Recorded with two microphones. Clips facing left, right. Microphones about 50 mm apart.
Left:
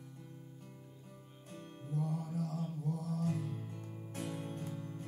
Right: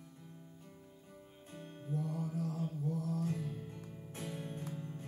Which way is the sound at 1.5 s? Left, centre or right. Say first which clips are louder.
Right 1 dB; centre.